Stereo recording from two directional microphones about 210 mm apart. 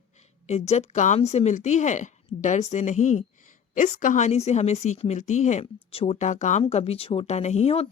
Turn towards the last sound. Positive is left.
turn(degrees=30)  # may be behind; listen again after turning